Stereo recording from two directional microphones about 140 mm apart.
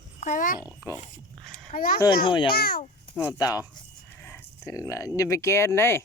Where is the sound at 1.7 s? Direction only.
90° left.